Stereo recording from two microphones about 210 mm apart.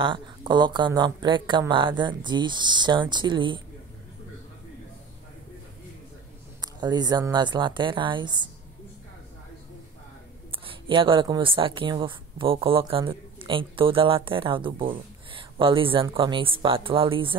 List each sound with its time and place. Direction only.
0.0 s speech: 25° right (ahead or behind)
6.6 s speech: 20° right (ahead or behind)
10.5 s speech: 25° right (ahead or behind)